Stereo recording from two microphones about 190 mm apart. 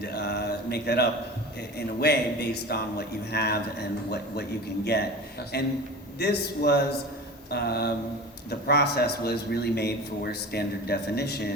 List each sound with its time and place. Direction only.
0.0 s a sound: 55° left (ahead or behind)
2.0 s a man's voice: 60° left (ahead or behind)
5.5 s a man's voice: 60° left (ahead or behind)